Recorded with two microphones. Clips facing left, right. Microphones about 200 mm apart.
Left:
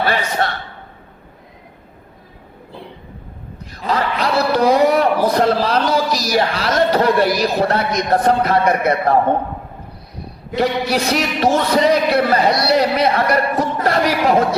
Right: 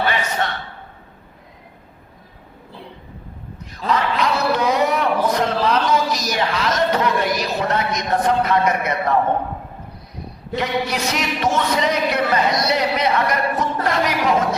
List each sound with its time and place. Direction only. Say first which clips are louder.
0.0 s a man's voice: left 3 dB; 35° left (ahead or behind)
3.8 s speech: left 1 dB; 35° left (ahead or behind)
10.5 s speech: left 5 dB; 35° left (ahead or behind)